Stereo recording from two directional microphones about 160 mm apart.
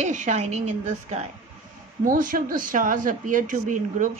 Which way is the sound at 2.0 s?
55° right (ahead or behind).